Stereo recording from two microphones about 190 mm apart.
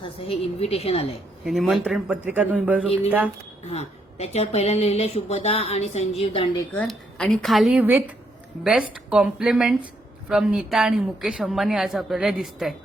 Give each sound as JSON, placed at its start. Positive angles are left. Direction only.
{"t": 0.2, "sound": "speech", "side_deg": 30}
{"t": 1.5, "sound": "a woman's voice", "side_deg": 0}
{"t": 3.7, "sound": "speech", "side_deg": 35}
{"t": 6.7, "sound": "a woman's voice", "side_deg": 5}